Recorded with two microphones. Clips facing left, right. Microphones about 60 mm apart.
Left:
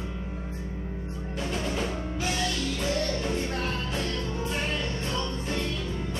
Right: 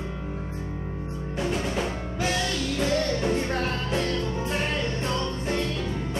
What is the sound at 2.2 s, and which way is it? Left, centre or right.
Music, right.